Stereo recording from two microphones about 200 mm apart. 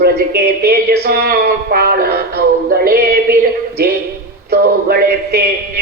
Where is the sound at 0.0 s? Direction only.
50° right (ahead or behind).